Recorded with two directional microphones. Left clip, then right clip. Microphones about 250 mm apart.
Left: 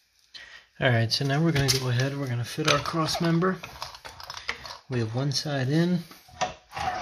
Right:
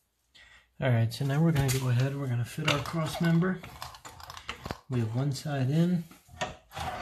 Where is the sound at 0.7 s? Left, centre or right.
Left.